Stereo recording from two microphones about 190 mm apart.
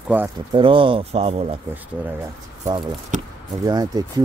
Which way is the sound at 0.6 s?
25° right (ahead or behind).